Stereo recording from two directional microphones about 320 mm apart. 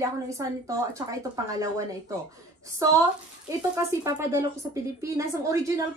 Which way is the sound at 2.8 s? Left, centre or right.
Centre.